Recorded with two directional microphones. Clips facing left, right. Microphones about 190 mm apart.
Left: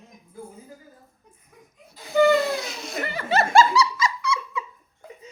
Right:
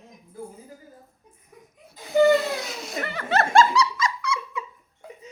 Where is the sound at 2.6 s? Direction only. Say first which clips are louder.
Even; centre (ahead or behind).